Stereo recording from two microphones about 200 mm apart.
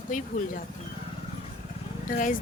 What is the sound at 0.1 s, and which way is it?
Speech, 40° left (ahead or behind).